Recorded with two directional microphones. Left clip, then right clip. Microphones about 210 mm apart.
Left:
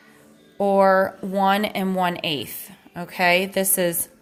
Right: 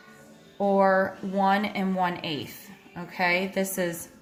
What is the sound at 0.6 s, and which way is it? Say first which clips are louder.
A woman's voice: left 5 dB; 45° left (ahead or behind).